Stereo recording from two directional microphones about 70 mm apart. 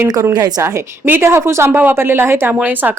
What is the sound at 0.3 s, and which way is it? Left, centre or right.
Speech, right.